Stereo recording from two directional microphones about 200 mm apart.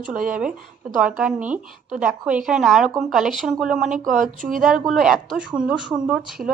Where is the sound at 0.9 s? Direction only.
5° right (ahead or behind).